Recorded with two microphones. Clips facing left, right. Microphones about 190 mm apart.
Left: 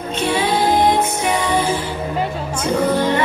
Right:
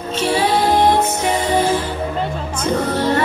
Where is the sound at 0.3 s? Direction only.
35° right (ahead or behind).